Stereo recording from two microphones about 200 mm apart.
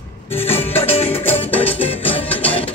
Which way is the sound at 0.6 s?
30° left (ahead or behind).